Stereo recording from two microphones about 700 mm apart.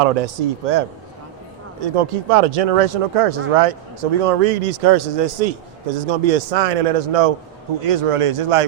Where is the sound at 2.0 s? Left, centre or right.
Right.